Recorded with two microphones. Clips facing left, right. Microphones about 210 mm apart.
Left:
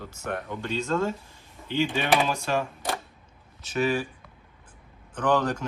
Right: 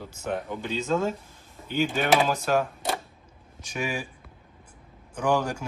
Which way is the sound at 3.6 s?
15° right (ahead or behind).